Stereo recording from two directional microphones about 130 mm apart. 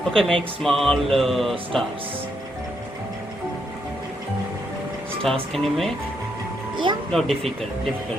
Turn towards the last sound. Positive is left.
turn(degrees=0)  # may be behind; listen again after turning